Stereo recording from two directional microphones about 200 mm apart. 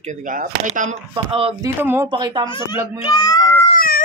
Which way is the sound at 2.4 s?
25° left (ahead or behind).